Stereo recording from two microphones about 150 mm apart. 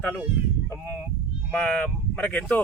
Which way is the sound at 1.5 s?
10° left (ahead or behind).